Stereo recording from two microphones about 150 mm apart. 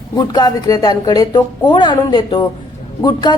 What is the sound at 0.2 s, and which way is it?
A man's voice, 25° left (ahead or behind).